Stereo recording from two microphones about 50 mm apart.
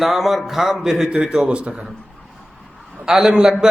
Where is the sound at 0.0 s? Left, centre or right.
Centre; by 1.8 s right.